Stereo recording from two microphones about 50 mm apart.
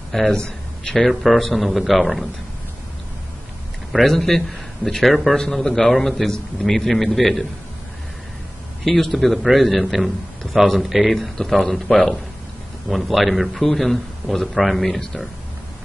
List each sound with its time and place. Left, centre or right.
0.3 s a man's voice: centre
1.0 s a man's voice: centre
3.9 s a man's voice: centre
8.8 s a man's voice: centre